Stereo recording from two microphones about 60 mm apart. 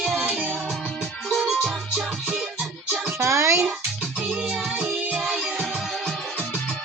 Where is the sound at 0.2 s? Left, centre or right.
Right.